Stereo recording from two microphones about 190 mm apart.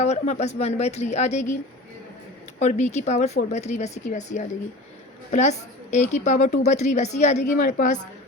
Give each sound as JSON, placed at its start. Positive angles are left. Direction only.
{"t": 0.0, "sound": "speech", "side_deg": 35}
{"t": 2.6, "sound": "speech", "side_deg": 35}